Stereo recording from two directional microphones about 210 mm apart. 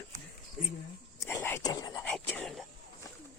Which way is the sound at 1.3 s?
10° left (ahead or behind).